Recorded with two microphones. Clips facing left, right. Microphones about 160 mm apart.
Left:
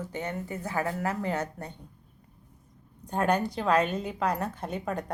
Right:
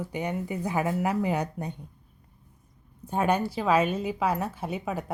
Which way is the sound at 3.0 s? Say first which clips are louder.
Right 1 dB; 5° right (ahead or behind).